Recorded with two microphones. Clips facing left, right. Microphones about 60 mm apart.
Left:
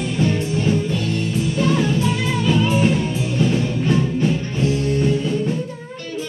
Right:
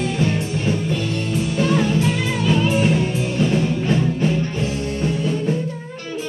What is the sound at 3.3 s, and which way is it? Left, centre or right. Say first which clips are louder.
Music: even; centre.